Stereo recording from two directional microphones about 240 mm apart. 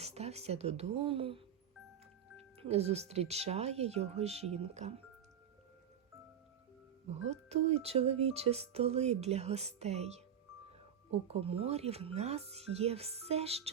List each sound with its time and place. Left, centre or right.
0.0 s speech: right
7.1 s speech: right